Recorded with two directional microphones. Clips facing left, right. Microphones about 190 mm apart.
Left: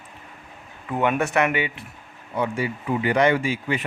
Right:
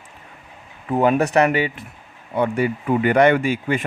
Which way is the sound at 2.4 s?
55° right (ahead or behind).